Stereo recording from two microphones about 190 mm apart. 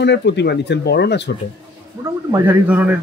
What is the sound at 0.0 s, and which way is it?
Speech, 65° left (ahead or behind).